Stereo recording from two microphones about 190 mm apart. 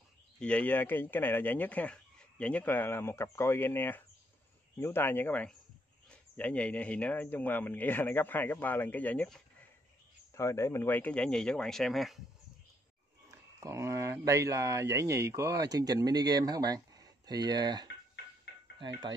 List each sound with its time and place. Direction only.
0.4 s speech: 5° left (ahead or behind)
13.6 s speech: 15° right (ahead or behind)